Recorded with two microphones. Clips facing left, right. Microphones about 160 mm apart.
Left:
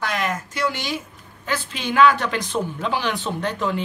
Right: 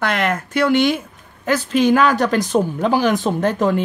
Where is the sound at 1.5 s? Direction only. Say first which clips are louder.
Right 11 dB; 45° right (ahead or behind).